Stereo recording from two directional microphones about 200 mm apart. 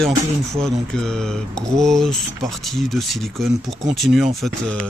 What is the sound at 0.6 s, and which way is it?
Speech, 5° left (ahead or behind).